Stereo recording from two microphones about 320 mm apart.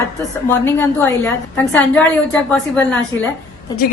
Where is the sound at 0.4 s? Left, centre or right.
Centre.